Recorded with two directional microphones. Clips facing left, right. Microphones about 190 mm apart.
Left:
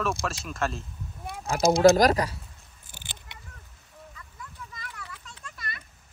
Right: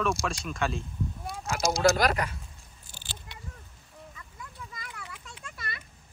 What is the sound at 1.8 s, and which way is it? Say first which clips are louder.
Speech: left 6 dB; 40° left (ahead or behind).